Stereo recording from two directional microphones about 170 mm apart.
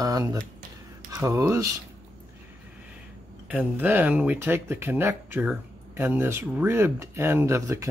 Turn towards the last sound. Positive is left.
turn(degrees=-15)  # may be behind; listen again after turning